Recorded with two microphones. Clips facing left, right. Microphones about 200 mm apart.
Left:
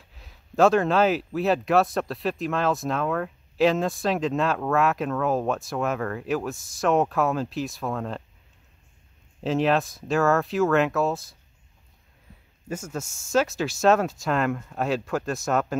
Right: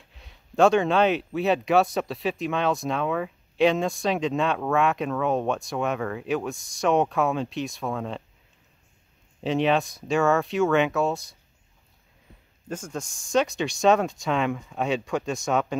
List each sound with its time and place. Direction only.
0.0 s speech: centre (ahead or behind)
9.4 s speech: centre (ahead or behind)
12.6 s speech: 10° left (ahead or behind)